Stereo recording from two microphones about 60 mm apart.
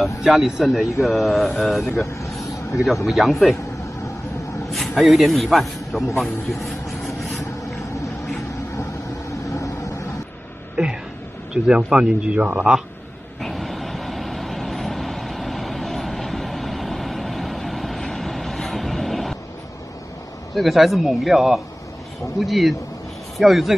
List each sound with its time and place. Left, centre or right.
0.0 s speech: centre
3.1 s speech: centre
4.6 s a man's voice: centre
6.1 s vehicle: centre
9.3 s vehicle: left
11.5 s speech: centre
13.4 s vehicle: centre
20.5 s speech: centre